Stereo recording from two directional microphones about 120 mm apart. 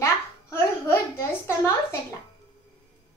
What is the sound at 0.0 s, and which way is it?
Babbling, 20° left (ahead or behind).